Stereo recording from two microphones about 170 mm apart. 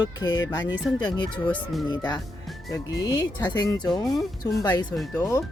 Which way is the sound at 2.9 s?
20° left (ahead or behind).